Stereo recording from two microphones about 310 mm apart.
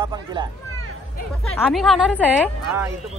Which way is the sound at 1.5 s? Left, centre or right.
Centre.